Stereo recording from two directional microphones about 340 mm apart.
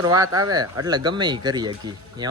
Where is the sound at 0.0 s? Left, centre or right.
Centre.